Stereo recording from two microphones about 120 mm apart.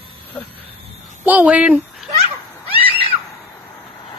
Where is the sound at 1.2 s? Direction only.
15° right (ahead or behind).